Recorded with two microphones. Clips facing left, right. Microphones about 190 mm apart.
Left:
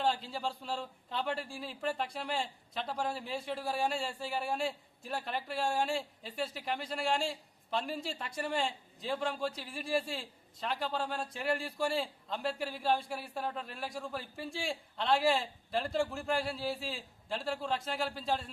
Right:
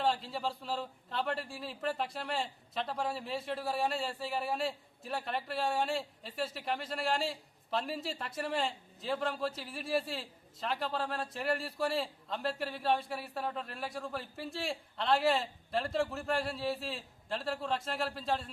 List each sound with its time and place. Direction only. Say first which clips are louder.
0.0 s a man's voice: right 1 dB; centre (ahead or behind)